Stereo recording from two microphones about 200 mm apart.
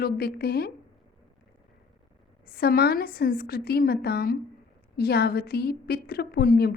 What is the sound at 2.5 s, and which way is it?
A woman's voice, 50° left (ahead or behind).